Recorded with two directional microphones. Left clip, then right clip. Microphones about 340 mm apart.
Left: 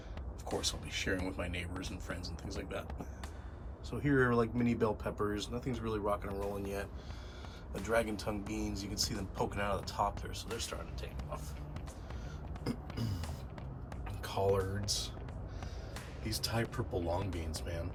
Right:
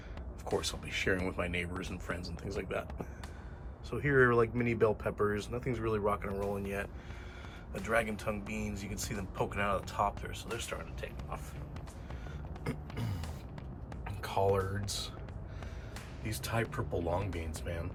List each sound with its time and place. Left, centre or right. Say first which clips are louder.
0.4 s speech: right 2 dB; centre
12.6 s music: even; centre
14.0 s a sound: right 3 dB; centre
14.8 s speech: left 2 dB; left
16.5 s speech: right 5 dB; centre